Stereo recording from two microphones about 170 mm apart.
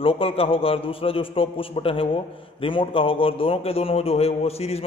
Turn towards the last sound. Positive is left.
turn(degrees=35)  # may be behind; listen again after turning